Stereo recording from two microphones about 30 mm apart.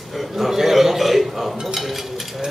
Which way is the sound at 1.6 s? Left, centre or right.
Centre.